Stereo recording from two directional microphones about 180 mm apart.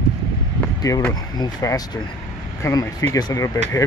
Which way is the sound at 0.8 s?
20° left (ahead or behind).